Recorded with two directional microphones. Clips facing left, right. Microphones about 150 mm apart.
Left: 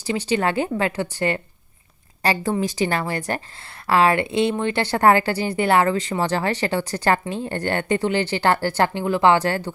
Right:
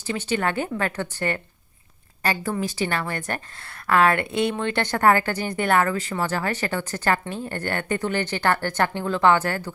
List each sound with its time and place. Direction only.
0.1 s a woman's voice: 25° left (ahead or behind)
2.4 s a woman's voice: 40° left (ahead or behind); by 5.6 s 10° left (ahead or behind)
5.7 s a woman's voice: 20° left (ahead or behind)